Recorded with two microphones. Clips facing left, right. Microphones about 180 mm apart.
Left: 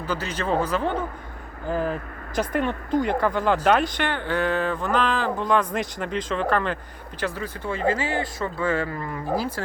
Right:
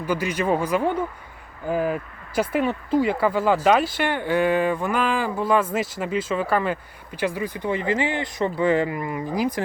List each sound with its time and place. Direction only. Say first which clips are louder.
0.0 s speech: right 4 dB; 10° right (ahead or behind)